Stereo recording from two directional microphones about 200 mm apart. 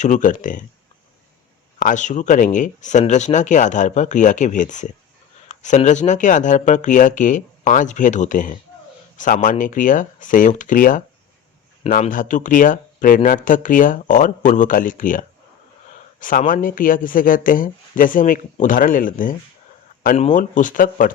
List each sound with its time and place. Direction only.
0.0 s speech: 40° left (ahead or behind)
1.8 s speech: 40° left (ahead or behind)
16.2 s speech: 40° left (ahead or behind)